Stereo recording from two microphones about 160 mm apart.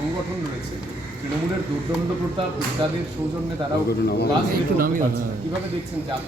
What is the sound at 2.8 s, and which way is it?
Speech, 35° right (ahead or behind).